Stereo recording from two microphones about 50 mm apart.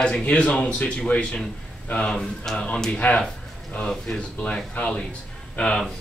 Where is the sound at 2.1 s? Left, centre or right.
Centre.